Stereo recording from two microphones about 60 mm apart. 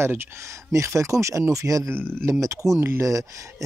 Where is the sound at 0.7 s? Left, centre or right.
Right.